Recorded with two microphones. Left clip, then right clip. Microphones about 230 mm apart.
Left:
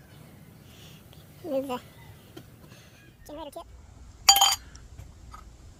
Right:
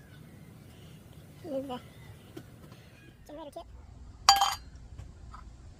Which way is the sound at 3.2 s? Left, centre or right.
Centre.